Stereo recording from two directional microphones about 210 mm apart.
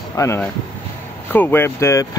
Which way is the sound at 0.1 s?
15° left (ahead or behind).